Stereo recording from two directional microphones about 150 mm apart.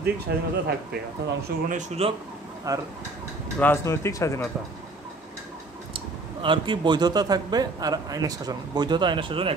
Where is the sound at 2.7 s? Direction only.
25° right (ahead or behind).